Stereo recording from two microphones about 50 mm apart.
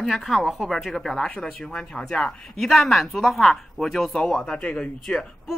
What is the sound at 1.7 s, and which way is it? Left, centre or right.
Speech, centre.